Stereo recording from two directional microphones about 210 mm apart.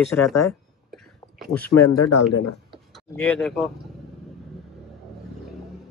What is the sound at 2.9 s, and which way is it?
Speech, centre (ahead or behind).